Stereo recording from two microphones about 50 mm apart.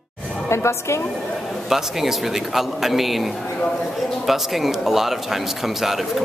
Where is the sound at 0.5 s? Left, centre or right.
Left.